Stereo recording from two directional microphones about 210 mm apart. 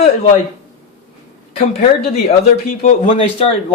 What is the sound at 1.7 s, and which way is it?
Speech, 30° left (ahead or behind).